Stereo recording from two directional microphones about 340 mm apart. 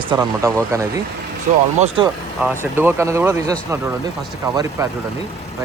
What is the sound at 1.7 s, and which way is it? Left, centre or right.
Speech, centre.